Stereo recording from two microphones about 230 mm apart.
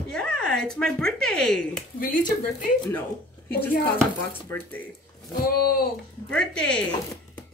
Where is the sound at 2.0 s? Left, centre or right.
Left.